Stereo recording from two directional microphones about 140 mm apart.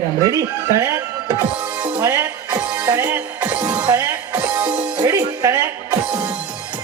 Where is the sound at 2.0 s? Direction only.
20° right (ahead or behind).